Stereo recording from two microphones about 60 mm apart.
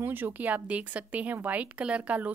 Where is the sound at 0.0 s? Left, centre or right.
Right.